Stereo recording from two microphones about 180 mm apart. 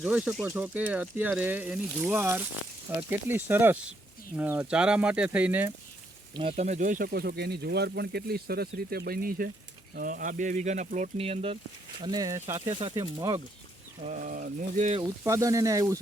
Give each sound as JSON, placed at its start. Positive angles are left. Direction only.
{"t": 0.0, "sound": "speech", "side_deg": -5}
{"t": 6.3, "sound": "speech", "side_deg": -35}
{"t": 11.9, "sound": "speech", "side_deg": -20}
{"t": 14.1, "sound": "speech", "side_deg": -50}
{"t": 14.9, "sound": "speech", "side_deg": -20}